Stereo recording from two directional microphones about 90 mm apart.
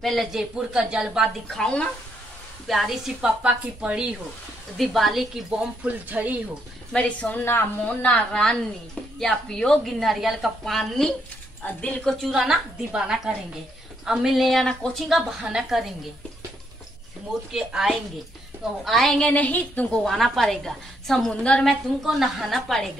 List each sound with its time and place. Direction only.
0.0 s a woman's voice: centre (ahead or behind)
1.6 s a woman's voice: 10° left (ahead or behind)
2.7 s a woman's voice: centre (ahead or behind)
4.7 s a woman's voice: centre (ahead or behind)
5.9 s a woman's voice: 15° right (ahead or behind)
6.9 s a woman's voice: 15° left (ahead or behind)
11.6 s a woman's voice: 15° left (ahead or behind)
12.0 s a woman's voice: centre (ahead or behind)
15.4 s a woman's voice: 5° right (ahead or behind)
17.5 s a woman's voice: 5° right (ahead or behind); by 20.0 s 20° left (ahead or behind)
20.0 s a woman's voice: centre (ahead or behind)
22.0 s a woman's voice: centre (ahead or behind)